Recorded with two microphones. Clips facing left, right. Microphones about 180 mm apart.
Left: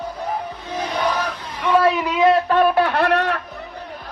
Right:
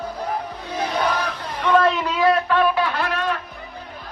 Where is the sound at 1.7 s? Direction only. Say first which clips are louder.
Left 1 dB; 10° left (ahead or behind).